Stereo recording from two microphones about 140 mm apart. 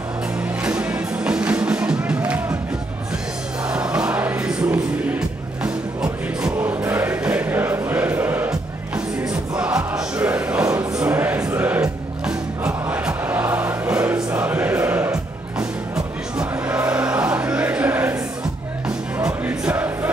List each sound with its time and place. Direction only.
0.7 s music: 5° right (ahead or behind)
3.7 s music: 5° right (ahead or behind)
10.6 s choir: 20° right (ahead or behind)
11.0 s music: 10° right (ahead or behind)
16.3 s music: 10° right (ahead or behind)